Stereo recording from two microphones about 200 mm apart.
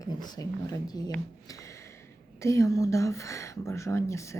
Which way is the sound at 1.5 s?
15° left (ahead or behind).